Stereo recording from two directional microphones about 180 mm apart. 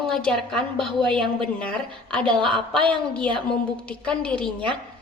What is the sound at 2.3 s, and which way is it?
Speech, 30° right (ahead or behind).